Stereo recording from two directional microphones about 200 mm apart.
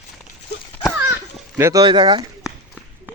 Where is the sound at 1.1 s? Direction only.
10° right (ahead or behind).